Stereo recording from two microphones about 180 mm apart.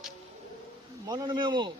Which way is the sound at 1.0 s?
25° right (ahead or behind).